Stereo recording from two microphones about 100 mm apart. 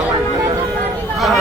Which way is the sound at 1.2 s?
Centre (ahead or behind).